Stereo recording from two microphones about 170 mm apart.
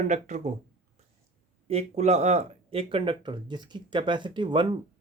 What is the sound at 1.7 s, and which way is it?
Speech, 40° right (ahead or behind).